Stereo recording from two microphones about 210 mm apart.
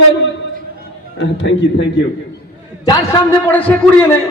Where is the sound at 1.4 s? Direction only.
60° left (ahead or behind).